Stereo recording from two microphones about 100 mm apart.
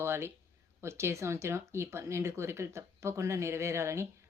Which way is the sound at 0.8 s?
25° right (ahead or behind).